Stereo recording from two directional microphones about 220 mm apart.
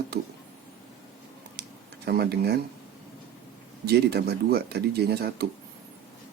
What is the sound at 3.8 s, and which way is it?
Speech, 45° right (ahead or behind).